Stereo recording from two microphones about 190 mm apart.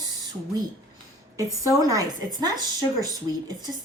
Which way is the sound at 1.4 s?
15° right (ahead or behind).